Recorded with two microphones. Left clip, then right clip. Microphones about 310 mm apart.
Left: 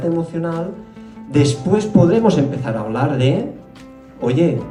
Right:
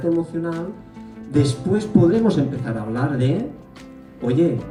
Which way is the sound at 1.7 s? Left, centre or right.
Centre.